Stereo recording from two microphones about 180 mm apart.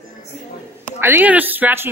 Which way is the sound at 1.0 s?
10° right (ahead or behind).